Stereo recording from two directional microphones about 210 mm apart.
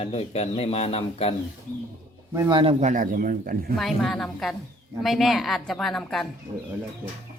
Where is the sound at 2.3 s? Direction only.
15° right (ahead or behind).